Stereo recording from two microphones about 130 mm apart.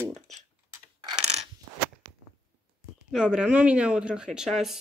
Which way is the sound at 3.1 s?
5° right (ahead or behind).